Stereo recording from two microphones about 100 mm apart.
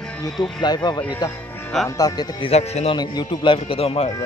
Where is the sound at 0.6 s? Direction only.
45° left (ahead or behind).